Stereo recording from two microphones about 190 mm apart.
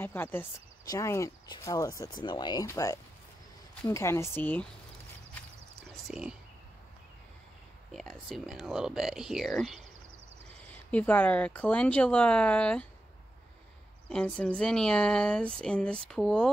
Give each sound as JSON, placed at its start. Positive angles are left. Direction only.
{"t": 0.0, "sound": "speech", "side_deg": 10}
{"t": 6.0, "sound": "speech", "side_deg": -5}
{"t": 7.9, "sound": "speech", "side_deg": 5}
{"t": 14.0, "sound": "speech", "side_deg": 5}